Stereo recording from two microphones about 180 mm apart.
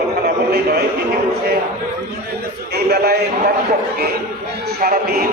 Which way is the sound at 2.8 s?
60° right (ahead or behind).